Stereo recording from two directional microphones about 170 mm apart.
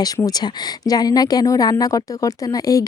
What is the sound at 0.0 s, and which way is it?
Speech, 20° left (ahead or behind).